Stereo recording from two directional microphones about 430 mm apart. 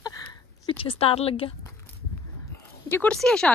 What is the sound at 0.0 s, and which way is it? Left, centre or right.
Chicken, centre.